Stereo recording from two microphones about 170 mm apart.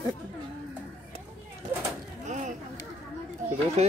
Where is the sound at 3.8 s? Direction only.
40° right (ahead or behind).